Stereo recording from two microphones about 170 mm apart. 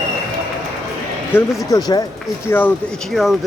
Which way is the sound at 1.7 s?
20° left (ahead or behind).